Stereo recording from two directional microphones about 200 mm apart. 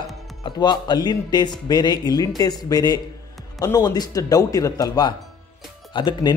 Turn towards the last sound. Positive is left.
turn(degrees=20)  # may be behind; listen again after turning